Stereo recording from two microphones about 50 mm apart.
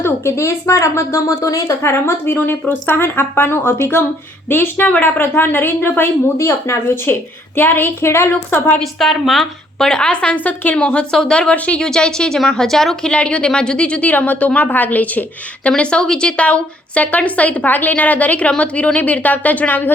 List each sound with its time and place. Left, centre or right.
0.0 s a woman's voice: left
1.6 s speech: left
6.3 s speech: left
8.0 s a woman's voice: left
8.8 s a woman's voice: centre
9.7 s a woman's voice: centre
10.3 s speech: left
10.8 s a woman's voice: centre
11.5 s a woman's voice: left
11.8 s a woman's voice: centre
13.1 s a woman's voice: left
15.7 s a woman's voice: centre; by 19.9 s left